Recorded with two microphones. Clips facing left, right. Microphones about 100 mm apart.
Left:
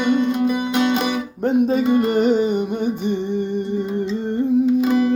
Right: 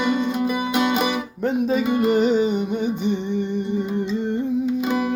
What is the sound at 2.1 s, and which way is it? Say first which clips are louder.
Music: left 1 dB; 60° left (ahead or behind).